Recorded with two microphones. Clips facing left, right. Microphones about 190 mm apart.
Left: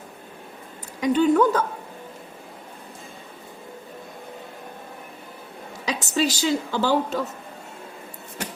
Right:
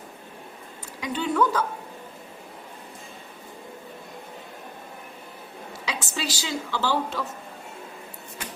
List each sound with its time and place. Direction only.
1.0 s a woman's voice: 45° left (ahead or behind)
5.8 s a woman's voice: 40° left (ahead or behind)